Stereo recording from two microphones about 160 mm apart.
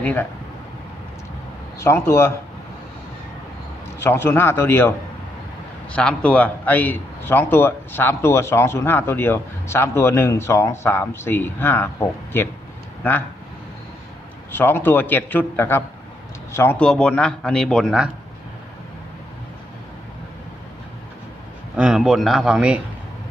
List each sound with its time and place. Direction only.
0.0 s speech: 10° left (ahead or behind)
1.8 s a man's voice: 15° left (ahead or behind)
4.0 s a man's voice: 15° left (ahead or behind)
14.5 s a man's voice: 15° left (ahead or behind)
21.8 s a man's voice: 5° right (ahead or behind)